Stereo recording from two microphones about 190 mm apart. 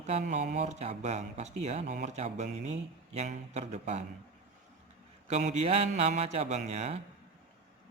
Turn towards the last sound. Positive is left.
turn(degrees=-35)  # may be behind; listen again after turning